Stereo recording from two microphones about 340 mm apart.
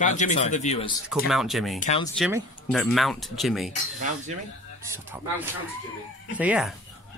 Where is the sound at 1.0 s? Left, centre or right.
Centre.